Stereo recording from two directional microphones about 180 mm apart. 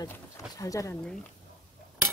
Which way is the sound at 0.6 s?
20° left (ahead or behind).